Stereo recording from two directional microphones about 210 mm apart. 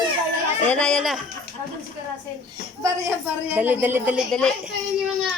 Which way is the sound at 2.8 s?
10° right (ahead or behind).